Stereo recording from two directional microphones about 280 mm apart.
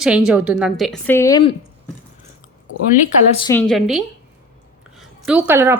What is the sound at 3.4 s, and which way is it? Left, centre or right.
Speech, centre.